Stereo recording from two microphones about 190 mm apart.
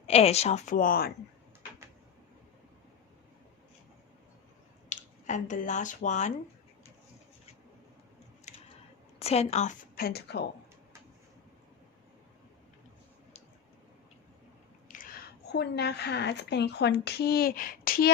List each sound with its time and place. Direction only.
0.1 s a woman's voice: 35° left (ahead or behind); by 1.1 s 50° left (ahead or behind)
4.9 s speech: 40° left (ahead or behind)
8.5 s a sound: 40° left (ahead or behind)
9.1 s a woman's voice: 35° left (ahead or behind)
9.9 s speech: 55° left (ahead or behind)
14.9 s a sound: 45° left (ahead or behind)
15.5 s speech: 60° left (ahead or behind)